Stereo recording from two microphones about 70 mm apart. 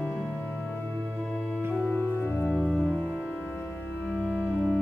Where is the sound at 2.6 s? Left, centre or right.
Centre.